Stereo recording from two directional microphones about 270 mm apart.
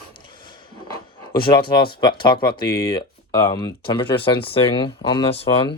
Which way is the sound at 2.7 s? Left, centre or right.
Centre.